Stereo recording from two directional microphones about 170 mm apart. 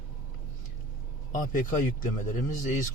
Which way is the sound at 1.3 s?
50° left (ahead or behind).